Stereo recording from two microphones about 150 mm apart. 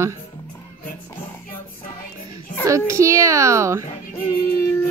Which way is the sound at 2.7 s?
20° right (ahead or behind).